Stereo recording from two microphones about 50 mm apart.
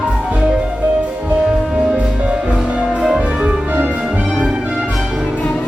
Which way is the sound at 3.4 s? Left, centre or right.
Right.